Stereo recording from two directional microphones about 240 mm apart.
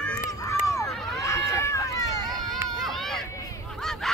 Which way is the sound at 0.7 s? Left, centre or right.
Centre.